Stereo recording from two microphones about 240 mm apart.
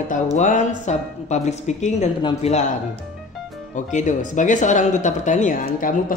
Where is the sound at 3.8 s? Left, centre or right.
Left.